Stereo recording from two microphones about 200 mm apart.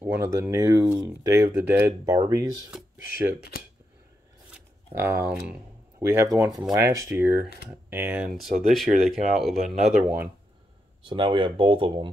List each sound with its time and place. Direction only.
0.0 s speech: 10° right (ahead or behind)
3.3 s speech: 50° left (ahead or behind)
4.9 s speech: 10° right (ahead or behind)
11.1 s speech: 25° right (ahead or behind)